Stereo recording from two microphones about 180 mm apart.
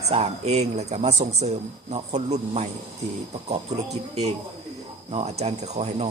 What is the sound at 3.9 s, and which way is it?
Speech, 35° right (ahead or behind).